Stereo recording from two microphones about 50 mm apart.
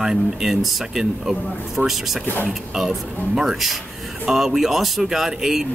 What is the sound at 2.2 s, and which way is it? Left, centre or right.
Speech, left.